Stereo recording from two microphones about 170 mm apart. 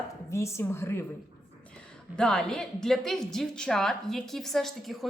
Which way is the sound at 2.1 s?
5° left (ahead or behind).